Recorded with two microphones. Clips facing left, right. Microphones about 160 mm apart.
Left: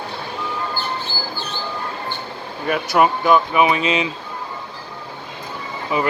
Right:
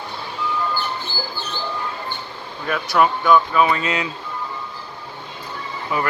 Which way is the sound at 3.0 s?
10° left (ahead or behind).